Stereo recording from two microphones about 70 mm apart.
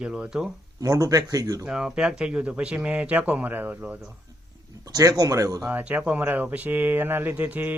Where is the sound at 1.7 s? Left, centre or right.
Centre.